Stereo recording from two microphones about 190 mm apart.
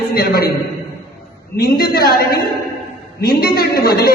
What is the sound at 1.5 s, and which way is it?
A woman's voice, 55° left (ahead or behind).